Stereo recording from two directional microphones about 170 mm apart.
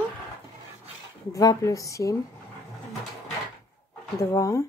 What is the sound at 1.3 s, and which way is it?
Speech, 20° left (ahead or behind).